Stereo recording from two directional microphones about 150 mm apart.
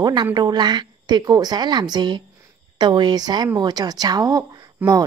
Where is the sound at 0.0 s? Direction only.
30° right (ahead or behind).